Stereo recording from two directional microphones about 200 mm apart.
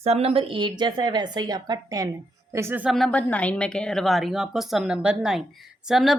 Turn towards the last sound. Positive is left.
turn(degrees=0)  # may be behind; listen again after turning